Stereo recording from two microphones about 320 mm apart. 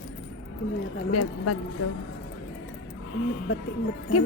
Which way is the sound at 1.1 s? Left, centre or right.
Left.